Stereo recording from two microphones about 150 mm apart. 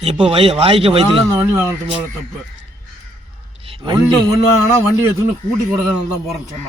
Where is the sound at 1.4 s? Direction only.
15° right (ahead or behind).